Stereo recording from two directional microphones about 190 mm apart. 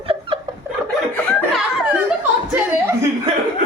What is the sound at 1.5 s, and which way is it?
Laughter, 5° right (ahead or behind).